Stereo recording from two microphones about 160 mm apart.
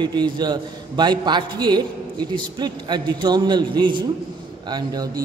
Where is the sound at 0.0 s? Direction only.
25° right (ahead or behind).